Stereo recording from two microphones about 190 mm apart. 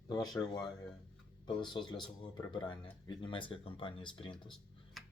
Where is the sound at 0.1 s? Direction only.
20° left (ahead or behind).